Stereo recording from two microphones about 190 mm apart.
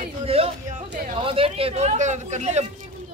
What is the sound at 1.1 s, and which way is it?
Speech, 30° right (ahead or behind).